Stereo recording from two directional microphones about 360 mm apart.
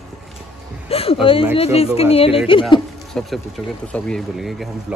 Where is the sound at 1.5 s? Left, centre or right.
Centre.